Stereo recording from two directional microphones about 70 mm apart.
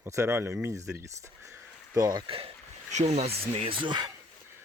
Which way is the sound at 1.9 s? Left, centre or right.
Right.